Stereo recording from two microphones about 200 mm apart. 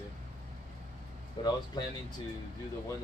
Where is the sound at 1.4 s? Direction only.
25° left (ahead or behind).